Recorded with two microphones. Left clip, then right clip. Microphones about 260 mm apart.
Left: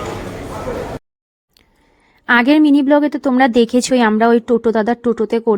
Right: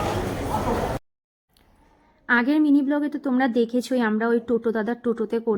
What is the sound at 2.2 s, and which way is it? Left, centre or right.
A woman's voice, left.